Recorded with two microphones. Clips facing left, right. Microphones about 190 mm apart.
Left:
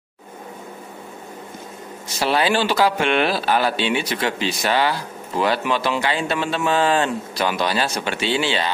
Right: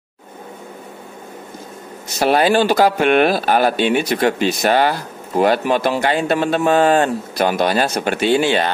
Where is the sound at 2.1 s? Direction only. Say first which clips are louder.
Right 5 dB; 45° right (ahead or behind).